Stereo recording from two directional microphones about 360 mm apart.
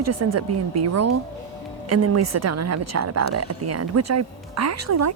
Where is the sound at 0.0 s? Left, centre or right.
Right.